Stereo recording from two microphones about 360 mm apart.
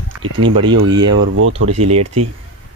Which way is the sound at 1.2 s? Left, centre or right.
Right.